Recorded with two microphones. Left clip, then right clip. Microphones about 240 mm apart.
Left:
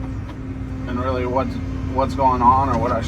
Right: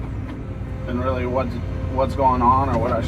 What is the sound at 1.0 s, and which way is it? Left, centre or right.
Speech, left.